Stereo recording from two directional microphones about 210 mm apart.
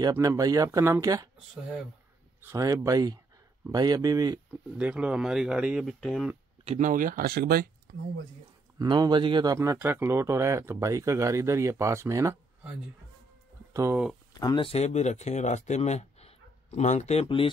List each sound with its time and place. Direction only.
0.0 s speech: 15° right (ahead or behind)
2.4 s speech: 15° right (ahead or behind)
4.7 s speech: 5° right (ahead or behind)
6.6 s speech: 35° right (ahead or behind)
8.7 s speech: 20° right (ahead or behind)
13.7 s speech: 15° right (ahead or behind)
14.4 s speech: 25° left (ahead or behind)